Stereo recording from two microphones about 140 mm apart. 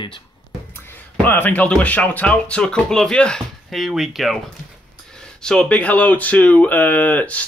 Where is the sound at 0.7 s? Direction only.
15° left (ahead or behind).